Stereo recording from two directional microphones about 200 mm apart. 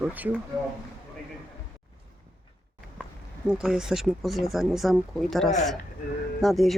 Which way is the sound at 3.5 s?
5° right (ahead or behind).